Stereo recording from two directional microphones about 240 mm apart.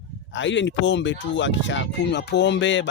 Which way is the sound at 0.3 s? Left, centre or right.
Left.